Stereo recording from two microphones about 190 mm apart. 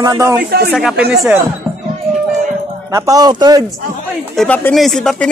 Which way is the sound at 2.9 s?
15° right (ahead or behind).